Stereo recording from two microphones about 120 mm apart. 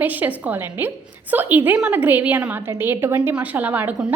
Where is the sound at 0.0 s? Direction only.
15° right (ahead or behind).